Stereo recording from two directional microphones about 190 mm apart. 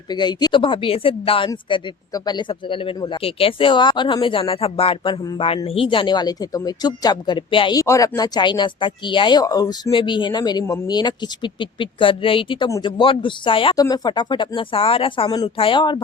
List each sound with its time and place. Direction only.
0.1 s speech: 20° left (ahead or behind)